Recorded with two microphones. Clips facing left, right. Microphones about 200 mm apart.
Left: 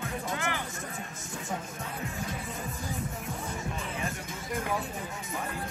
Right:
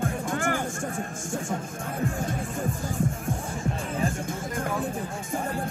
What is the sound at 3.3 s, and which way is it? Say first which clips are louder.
Music: right 6 dB; 30° right (ahead or behind).